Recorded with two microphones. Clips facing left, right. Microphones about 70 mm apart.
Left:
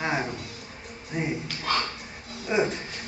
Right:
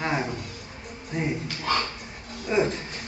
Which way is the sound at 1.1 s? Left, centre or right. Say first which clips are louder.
Right 1 dB; centre.